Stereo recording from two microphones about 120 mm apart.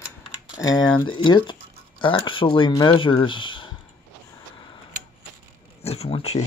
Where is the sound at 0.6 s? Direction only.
35° left (ahead or behind).